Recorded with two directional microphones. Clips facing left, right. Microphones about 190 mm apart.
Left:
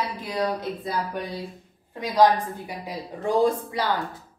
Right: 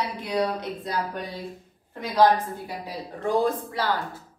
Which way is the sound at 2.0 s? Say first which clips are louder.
Left 1 dB; 15° left (ahead or behind).